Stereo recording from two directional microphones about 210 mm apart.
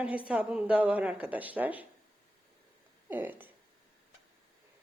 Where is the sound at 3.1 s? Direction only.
10° right (ahead or behind).